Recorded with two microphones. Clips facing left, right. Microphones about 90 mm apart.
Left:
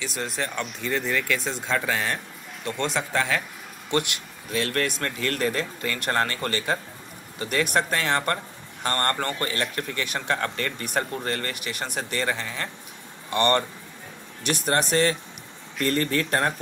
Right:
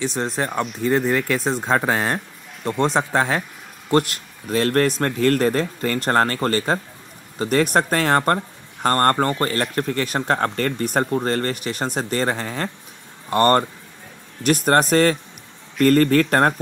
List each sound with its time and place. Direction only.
0.0 s speech: 35° right (ahead or behind)